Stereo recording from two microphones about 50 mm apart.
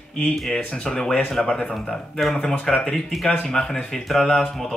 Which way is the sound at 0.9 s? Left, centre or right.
Centre.